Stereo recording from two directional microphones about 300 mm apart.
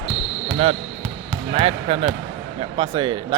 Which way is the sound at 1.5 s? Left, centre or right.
Right.